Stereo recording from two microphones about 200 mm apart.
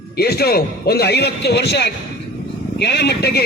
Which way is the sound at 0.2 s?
50° left (ahead or behind).